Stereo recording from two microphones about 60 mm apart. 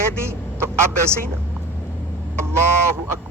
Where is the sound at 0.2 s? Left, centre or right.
Right.